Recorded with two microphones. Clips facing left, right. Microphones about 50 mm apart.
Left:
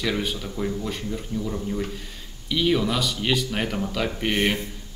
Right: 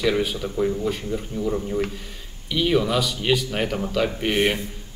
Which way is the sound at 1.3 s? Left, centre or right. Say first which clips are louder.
Right 1 dB; right.